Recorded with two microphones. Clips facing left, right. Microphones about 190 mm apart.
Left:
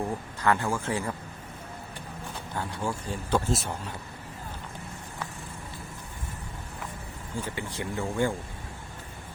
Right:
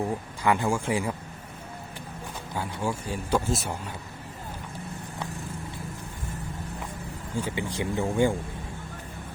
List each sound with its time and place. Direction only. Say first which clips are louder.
0.0 s speech: right 1 dB; 15° right (ahead or behind)
2.6 s speech: right 2 dB; 10° right (ahead or behind)
7.4 s speech: right 5 dB; 15° right (ahead or behind)